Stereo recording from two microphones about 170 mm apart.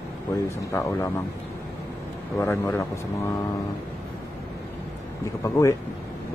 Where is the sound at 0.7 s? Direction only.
15° left (ahead or behind).